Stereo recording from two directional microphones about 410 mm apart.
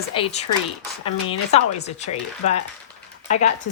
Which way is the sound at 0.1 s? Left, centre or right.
Centre.